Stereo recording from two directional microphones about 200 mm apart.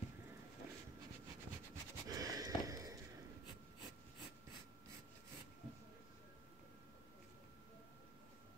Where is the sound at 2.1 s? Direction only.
20° right (ahead or behind).